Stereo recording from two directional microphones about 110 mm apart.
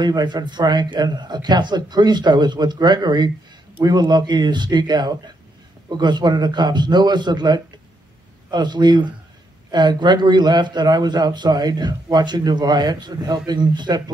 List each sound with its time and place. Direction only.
0.0 s a man's voice: 40° right (ahead or behind)